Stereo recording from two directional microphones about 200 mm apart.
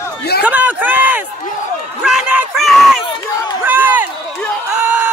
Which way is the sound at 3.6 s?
10° right (ahead or behind).